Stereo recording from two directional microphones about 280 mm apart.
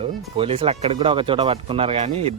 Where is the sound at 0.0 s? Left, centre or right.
Centre.